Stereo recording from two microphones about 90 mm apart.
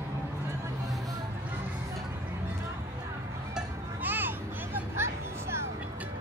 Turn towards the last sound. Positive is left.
turn(degrees=-30)  # may be behind; listen again after turning